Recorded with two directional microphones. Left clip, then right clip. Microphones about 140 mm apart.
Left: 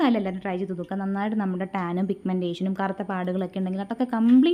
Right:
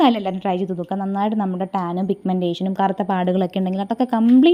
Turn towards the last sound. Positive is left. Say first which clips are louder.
# right 7 dB
turn(degrees=-35)  # may be behind; listen again after turning